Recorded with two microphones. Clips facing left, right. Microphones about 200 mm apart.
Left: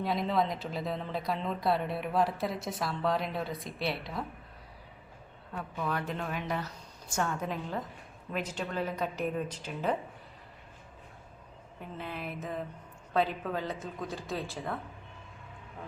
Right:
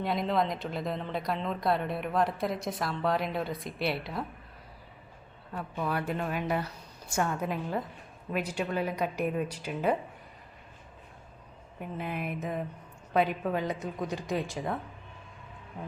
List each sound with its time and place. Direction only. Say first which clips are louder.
0.0 s speech: right 1 dB; centre (ahead or behind)
5.7 s a woman's voice: right 3 dB; 10° right (ahead or behind)
11.8 s a woman's voice: right 4 dB; 15° right (ahead or behind)